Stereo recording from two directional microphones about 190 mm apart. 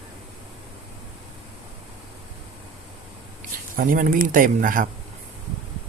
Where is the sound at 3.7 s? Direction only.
45° right (ahead or behind).